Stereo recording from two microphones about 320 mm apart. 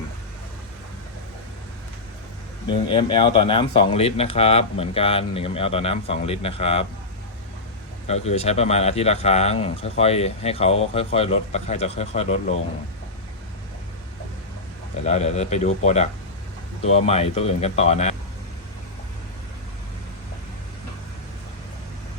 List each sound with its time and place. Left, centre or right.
2.6 s speech: centre
8.0 s speech: centre
15.0 s speech: left